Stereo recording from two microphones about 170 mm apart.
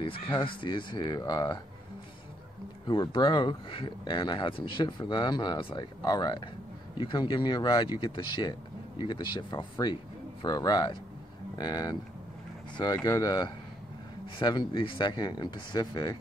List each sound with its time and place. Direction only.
0.0 s speech: 30° left (ahead or behind)
2.9 s speech: 25° left (ahead or behind)